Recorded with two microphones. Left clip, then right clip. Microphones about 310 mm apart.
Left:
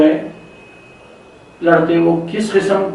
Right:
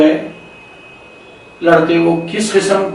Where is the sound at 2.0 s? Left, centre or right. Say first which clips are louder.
Right 1 dB; left.